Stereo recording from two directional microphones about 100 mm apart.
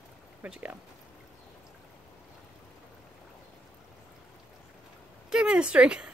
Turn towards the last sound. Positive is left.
turn(degrees=-10)  # may be behind; listen again after turning